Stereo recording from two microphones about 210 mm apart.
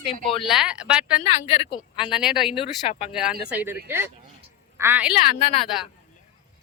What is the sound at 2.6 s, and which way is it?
Speech, 30° left (ahead or behind).